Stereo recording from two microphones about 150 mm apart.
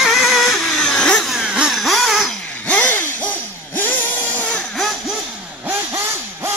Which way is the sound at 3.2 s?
10° left (ahead or behind).